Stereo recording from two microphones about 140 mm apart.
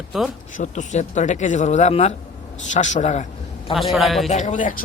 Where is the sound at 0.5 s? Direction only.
65° left (ahead or behind).